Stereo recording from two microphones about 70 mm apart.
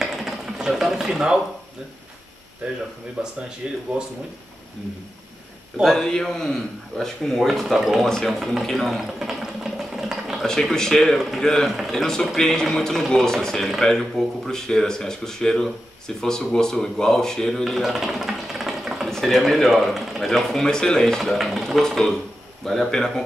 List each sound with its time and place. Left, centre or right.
0.0 s a sound: centre
3.3 s speech: centre
5.9 s a man's voice: centre
8.3 s sewing machine: centre
10.4 s a man's voice: centre
17.6 s sewing machine: centre
19.0 s a man's voice: centre